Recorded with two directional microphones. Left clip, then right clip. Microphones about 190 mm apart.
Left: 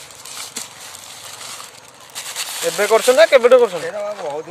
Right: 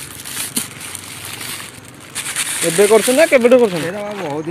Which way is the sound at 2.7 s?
5° left (ahead or behind).